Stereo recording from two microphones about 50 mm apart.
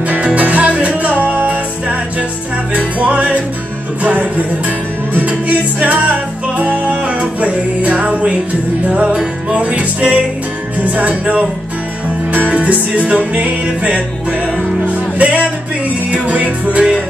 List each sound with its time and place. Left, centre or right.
0.0 s music: right
9.1 s music: centre